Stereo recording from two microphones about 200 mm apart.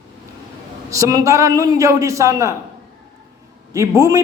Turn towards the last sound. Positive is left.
turn(degrees=-15)  # may be behind; listen again after turning